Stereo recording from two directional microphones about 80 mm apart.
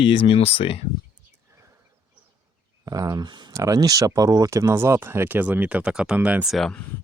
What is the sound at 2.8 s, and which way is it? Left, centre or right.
Speech, right.